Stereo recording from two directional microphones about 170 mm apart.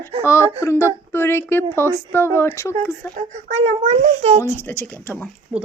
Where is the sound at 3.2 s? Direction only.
40° right (ahead or behind).